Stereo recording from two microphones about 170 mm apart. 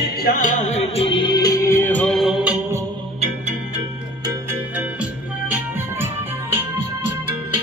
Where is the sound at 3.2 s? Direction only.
40° right (ahead or behind).